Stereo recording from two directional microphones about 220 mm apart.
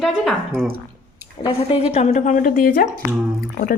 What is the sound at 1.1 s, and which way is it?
Speech, 20° left (ahead or behind).